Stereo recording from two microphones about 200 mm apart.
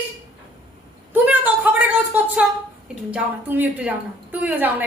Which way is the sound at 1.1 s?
10° right (ahead or behind).